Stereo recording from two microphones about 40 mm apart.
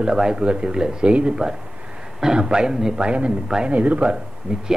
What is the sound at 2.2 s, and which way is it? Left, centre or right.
A man's voice, centre.